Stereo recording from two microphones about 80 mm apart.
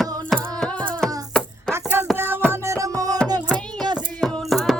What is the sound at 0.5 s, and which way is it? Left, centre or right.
Music, centre.